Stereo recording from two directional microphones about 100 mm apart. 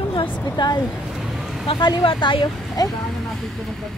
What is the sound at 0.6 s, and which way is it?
Speech, 50° left (ahead or behind).